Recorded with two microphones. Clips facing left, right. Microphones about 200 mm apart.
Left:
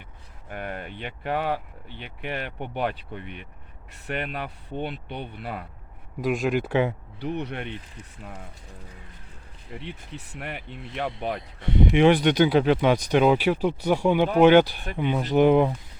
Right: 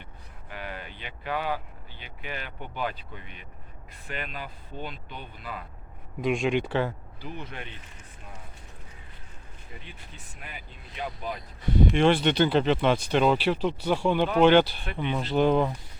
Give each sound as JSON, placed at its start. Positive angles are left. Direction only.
{"t": 0.5, "sound": "speech", "side_deg": 55}
{"t": 6.2, "sound": "speech", "side_deg": 0}
{"t": 7.2, "sound": "speech", "side_deg": 70}
{"t": 9.7, "sound": "speech", "side_deg": 70}
{"t": 11.9, "sound": "speech", "side_deg": 15}